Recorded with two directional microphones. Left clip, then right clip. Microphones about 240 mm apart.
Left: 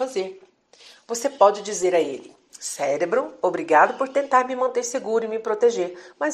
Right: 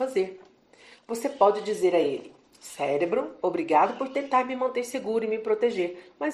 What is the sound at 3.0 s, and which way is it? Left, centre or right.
Speech, centre.